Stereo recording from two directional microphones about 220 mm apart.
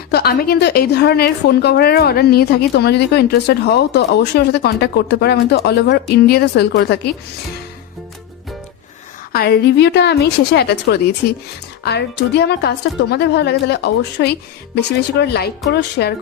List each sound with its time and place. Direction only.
0.1 s a woman's voice: 45° left (ahead or behind)
9.3 s a woman's voice: 45° left (ahead or behind)